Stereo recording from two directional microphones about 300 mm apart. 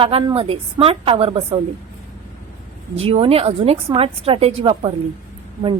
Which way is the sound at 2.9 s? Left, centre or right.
Centre.